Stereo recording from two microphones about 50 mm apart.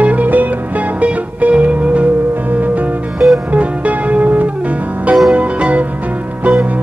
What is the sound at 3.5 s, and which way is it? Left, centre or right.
Music, right.